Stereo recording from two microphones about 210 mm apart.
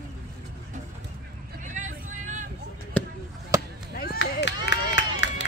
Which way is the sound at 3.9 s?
45° left (ahead or behind).